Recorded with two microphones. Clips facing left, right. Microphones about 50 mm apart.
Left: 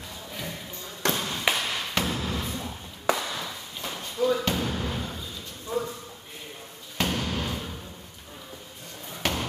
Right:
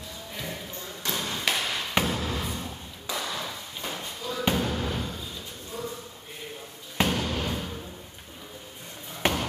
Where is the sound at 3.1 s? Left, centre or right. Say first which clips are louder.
Left 7 dB; left.